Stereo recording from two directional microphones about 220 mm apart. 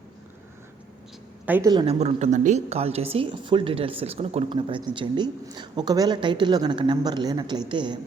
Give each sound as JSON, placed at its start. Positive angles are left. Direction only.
{"t": 1.5, "sound": "speech", "side_deg": -10}
{"t": 1.7, "sound": "speech", "side_deg": -25}